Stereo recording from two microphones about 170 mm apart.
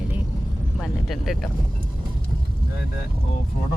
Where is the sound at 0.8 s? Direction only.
Centre (ahead or behind).